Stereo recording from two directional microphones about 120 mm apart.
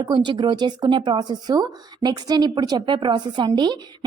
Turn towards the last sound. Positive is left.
turn(degrees=-40)  # may be behind; listen again after turning